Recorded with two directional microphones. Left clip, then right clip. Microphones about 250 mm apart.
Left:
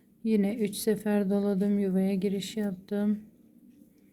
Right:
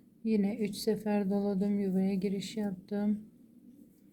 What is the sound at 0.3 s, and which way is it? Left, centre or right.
Speech, centre.